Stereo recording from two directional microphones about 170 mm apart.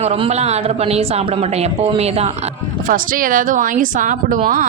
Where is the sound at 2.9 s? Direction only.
55° right (ahead or behind).